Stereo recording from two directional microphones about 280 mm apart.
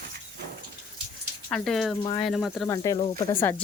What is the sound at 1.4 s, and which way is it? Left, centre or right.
Speech, centre.